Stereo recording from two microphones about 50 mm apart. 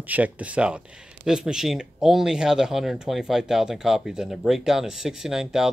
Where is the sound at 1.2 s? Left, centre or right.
Centre.